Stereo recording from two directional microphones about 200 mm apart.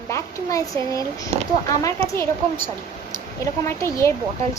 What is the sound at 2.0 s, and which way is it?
Speech, 30° right (ahead or behind).